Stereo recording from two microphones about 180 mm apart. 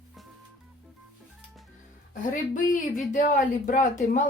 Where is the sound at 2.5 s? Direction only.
45° left (ahead or behind).